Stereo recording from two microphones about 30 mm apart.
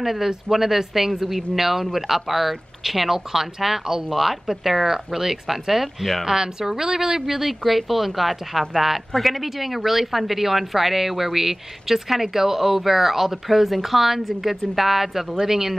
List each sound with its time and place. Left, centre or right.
0.0 s speech: centre
6.2 s speech: right